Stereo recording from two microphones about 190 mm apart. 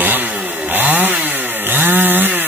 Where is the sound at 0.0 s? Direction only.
10° right (ahead or behind).